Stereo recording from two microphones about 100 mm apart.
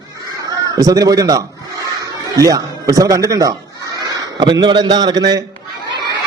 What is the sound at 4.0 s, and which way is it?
A man's voice, 45° right (ahead or behind).